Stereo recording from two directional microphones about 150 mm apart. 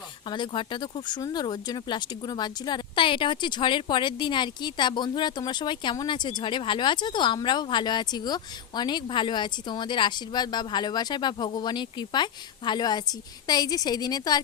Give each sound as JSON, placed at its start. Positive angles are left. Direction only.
{"t": 0.3, "sound": "speech", "side_deg": 30}